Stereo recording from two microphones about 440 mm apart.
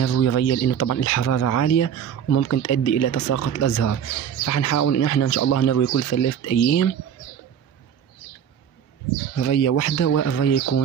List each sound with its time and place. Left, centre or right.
0.0 s speech: left
9.4 s speech: left